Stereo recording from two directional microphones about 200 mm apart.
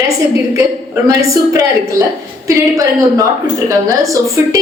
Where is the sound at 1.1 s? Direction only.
15° right (ahead or behind).